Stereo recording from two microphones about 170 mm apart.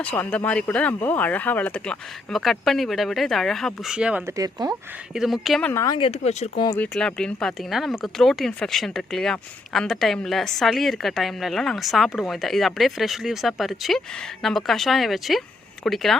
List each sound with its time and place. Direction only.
0.0 s speech: 10° left (ahead or behind); by 4.4 s 5° right (ahead or behind)
4.4 s speech: 20° right (ahead or behind)
5.1 s speech: centre (ahead or behind)
5.7 s speech: 20° left (ahead or behind)
6.1 s speech: 40° left (ahead or behind)
6.7 s speech: 5° left (ahead or behind)